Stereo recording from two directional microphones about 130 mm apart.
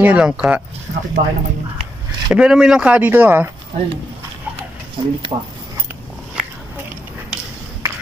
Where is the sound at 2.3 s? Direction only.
5° right (ahead or behind).